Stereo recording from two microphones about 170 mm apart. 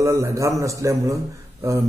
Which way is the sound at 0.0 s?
20° right (ahead or behind).